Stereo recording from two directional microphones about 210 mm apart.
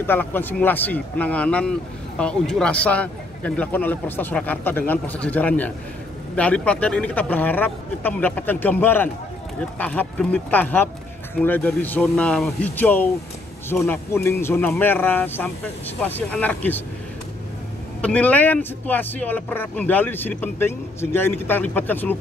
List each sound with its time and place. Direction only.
0.0 s speech: 10° left (ahead or behind)
18.0 s speech: 5° left (ahead or behind)